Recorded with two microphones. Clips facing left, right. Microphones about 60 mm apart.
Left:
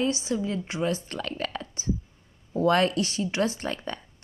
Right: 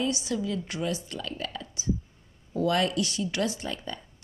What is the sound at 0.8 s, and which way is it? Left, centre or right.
A woman's voice, left.